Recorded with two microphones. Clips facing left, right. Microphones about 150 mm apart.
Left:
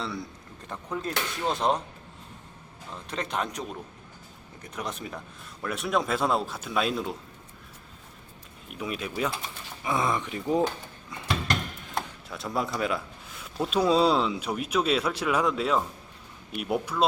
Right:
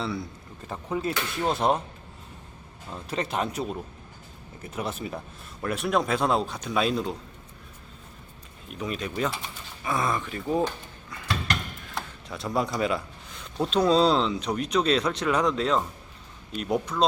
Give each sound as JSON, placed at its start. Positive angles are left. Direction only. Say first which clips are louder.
{"t": 0.0, "sound": "speech", "louder": "right 3 dB", "side_deg": 0}
{"t": 3.1, "sound": "speech", "louder": "right 3 dB", "side_deg": -5}
{"t": 8.7, "sound": "speech", "louder": "right 1 dB", "side_deg": 5}
{"t": 9.8, "sound": "speech", "louder": "even", "side_deg": 20}
{"t": 11.1, "sound": "mechanisms", "louder": "left 1 dB", "side_deg": 20}
{"t": 12.3, "sound": "speech", "louder": "right 3 dB", "side_deg": 0}